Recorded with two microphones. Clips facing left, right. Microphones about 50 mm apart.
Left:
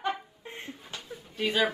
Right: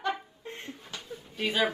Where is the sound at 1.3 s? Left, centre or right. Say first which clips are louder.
Left 1 dB; centre.